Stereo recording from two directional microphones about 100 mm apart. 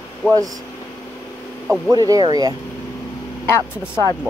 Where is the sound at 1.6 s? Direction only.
Centre (ahead or behind).